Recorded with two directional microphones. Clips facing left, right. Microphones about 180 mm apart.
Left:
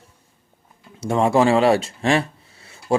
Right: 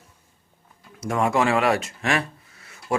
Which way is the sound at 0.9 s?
30° left (ahead or behind).